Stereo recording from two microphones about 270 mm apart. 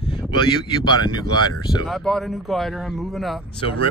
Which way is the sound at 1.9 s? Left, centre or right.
Centre.